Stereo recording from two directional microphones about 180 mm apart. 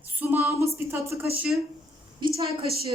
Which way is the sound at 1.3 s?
5° right (ahead or behind).